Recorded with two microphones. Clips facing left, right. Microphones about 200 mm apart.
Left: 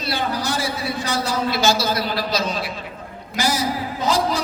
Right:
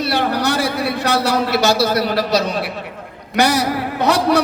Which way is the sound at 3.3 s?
65° right (ahead or behind).